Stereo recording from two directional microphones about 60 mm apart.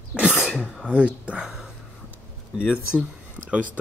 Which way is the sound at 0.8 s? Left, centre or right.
Centre.